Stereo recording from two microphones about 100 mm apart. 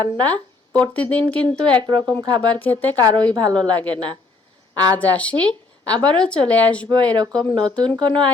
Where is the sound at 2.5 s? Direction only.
15° left (ahead or behind).